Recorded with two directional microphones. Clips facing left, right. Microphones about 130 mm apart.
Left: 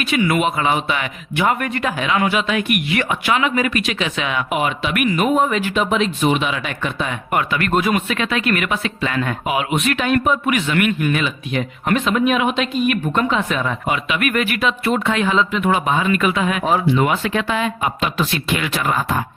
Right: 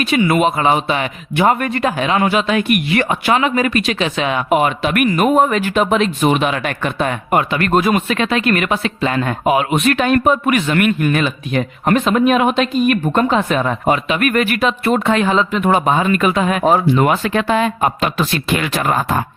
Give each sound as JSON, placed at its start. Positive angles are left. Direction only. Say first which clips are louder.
{"t": 0.0, "sound": "speech", "louder": "right 4 dB", "side_deg": -30}
{"t": 7.3, "sound": "speech", "louder": "right 3 dB", "side_deg": -30}